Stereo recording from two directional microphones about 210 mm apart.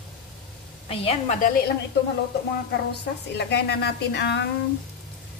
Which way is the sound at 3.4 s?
50° left (ahead or behind).